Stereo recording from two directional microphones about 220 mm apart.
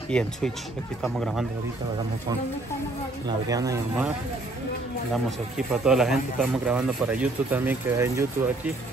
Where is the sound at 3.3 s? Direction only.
15° right (ahead or behind).